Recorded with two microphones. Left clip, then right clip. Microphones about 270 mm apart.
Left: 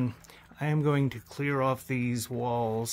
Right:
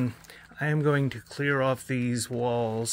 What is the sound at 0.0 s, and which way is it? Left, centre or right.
Speech, centre.